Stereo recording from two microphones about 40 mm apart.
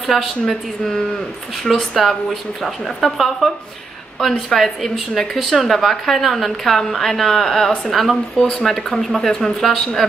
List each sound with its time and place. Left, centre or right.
0.0 s a woman's voice: centre
4.6 s a woman's voice: centre
8.4 s speech: left
8.6 s speech: centre